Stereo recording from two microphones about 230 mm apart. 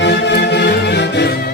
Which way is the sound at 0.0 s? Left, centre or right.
Left.